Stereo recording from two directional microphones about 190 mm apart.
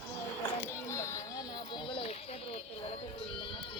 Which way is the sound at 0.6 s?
15° left (ahead or behind).